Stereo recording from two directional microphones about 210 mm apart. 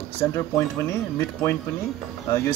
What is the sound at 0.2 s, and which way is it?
Speech, 15° left (ahead or behind).